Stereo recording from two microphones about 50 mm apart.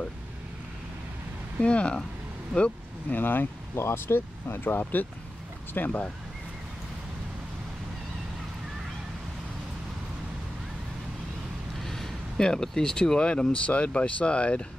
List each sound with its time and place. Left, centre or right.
1.6 s speech: left
3.1 s speech: left
5.8 s speech: left
11.8 s speech: centre; by 14.7 s left